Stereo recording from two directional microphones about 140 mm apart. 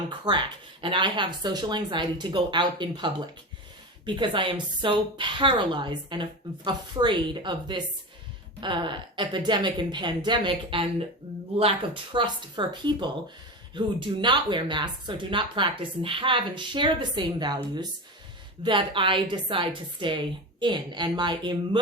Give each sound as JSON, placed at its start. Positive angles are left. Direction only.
{"t": 0.1, "sound": "speech", "side_deg": -35}